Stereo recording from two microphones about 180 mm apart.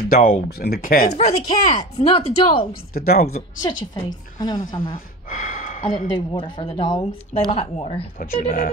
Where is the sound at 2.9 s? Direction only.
60° left (ahead or behind).